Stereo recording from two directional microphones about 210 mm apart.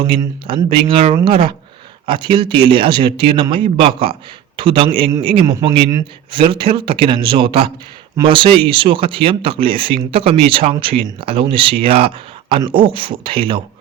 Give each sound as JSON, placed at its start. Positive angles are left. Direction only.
{"t": 0.1, "sound": "speech", "side_deg": -25}